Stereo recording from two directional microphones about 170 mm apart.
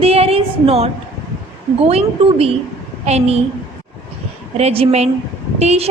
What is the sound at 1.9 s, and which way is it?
A woman's voice, 35° right (ahead or behind).